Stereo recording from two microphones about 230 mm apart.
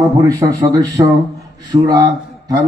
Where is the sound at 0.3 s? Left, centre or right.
Centre.